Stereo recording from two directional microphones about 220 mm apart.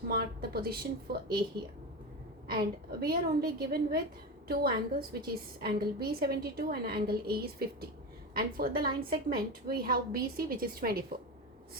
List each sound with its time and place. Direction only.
0.1 s a woman's voice: 45° right (ahead or behind)
2.5 s a woman's voice: 45° right (ahead or behind)